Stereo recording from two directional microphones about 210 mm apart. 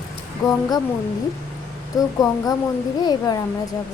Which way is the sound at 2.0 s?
15° left (ahead or behind).